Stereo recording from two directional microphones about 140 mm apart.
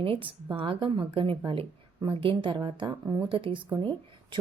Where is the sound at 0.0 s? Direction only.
40° right (ahead or behind).